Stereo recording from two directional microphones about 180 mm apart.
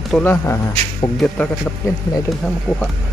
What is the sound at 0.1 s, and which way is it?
Speech, 10° left (ahead or behind).